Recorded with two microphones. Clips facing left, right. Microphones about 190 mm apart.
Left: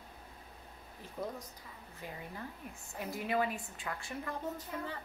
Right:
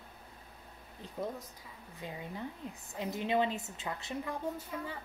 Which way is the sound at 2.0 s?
20° right (ahead or behind).